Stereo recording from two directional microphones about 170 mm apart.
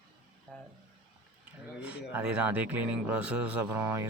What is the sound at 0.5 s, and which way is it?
Speech, 10° left (ahead or behind).